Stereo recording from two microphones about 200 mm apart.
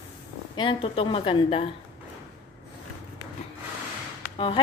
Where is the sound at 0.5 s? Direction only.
25° left (ahead or behind).